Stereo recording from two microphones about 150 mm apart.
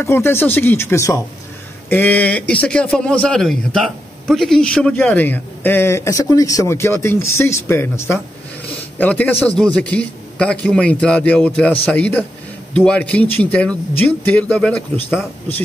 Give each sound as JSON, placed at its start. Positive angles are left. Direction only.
{"t": 0.0, "sound": "a man's voice", "side_deg": 15}